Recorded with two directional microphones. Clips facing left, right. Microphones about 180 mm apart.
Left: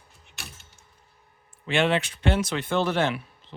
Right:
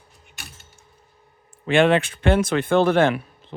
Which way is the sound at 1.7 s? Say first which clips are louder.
Right 6 dB; 50° right (ahead or behind).